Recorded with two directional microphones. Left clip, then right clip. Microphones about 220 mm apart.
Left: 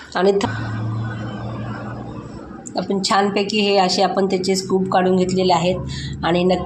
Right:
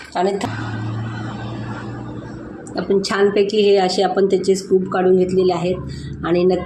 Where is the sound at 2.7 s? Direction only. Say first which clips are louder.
Even; 20° left (ahead or behind).